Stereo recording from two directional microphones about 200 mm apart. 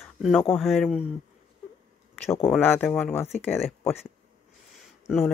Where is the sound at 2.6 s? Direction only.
10° left (ahead or behind).